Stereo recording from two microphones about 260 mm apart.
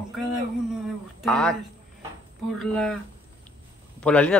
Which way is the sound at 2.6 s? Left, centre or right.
Centre.